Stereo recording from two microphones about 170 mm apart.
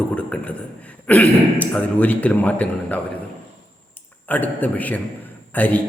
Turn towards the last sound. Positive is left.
turn(degrees=10)  # may be behind; listen again after turning